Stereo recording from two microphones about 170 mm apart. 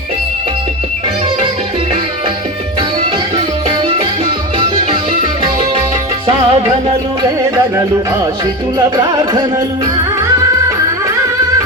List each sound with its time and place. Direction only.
3.3 s music: 30° right (ahead or behind)
9.0 s music: 25° right (ahead or behind)